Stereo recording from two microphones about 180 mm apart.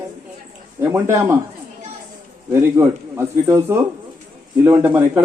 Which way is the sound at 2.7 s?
15° right (ahead or behind).